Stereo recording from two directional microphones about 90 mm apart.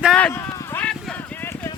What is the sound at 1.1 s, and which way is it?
Clip-clop, 25° left (ahead or behind).